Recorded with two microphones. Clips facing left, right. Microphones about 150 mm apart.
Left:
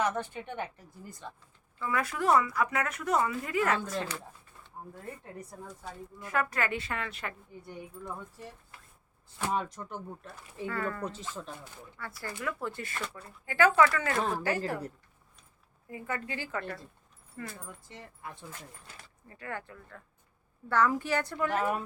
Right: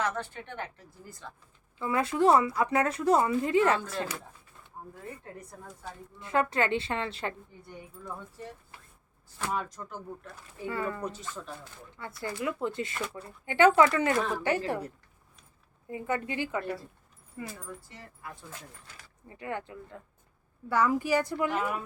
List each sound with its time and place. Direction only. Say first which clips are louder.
0.0 s speech: left 1 dB; 15° left (ahead or behind)
1.8 s speech: right 6 dB; 25° right (ahead or behind)
6.1 s speech: right 4 dB; 25° right (ahead or behind)
9.4 s speech: left 1 dB; 20° left (ahead or behind)
10.7 s a woman's voice: right 2 dB; 15° right (ahead or behind)
12.2 s speech: right 4 dB; 20° right (ahead or behind)
15.9 s a woman's voice: right 5 dB; 25° right (ahead or behind)
17.8 s speech: left 1 dB; 20° left (ahead or behind)
19.3 s a woman's voice: right 4 dB; 20° right (ahead or behind)